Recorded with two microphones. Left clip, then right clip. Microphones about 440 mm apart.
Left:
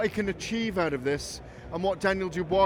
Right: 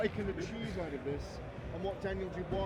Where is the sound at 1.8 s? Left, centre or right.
Left.